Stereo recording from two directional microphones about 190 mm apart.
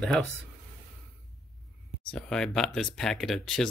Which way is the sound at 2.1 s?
5° left (ahead or behind).